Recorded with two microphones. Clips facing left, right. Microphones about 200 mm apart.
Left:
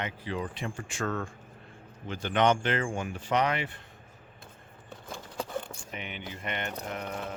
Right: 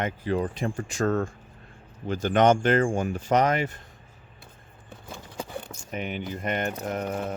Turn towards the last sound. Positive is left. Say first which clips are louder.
# right 7 dB
turn(degrees=-45)  # may be behind; listen again after turning